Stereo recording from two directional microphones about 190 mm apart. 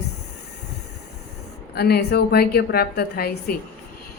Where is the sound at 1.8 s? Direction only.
55° left (ahead or behind).